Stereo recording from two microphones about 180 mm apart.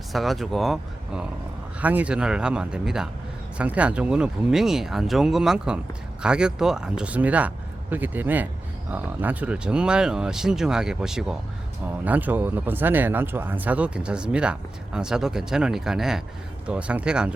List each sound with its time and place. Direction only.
0.1 s speech: centre (ahead or behind)